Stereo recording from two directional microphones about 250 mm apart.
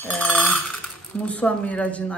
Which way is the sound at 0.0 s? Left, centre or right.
Centre.